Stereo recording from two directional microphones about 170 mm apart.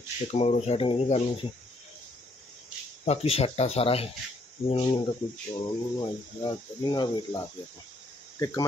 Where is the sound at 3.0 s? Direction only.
35° left (ahead or behind).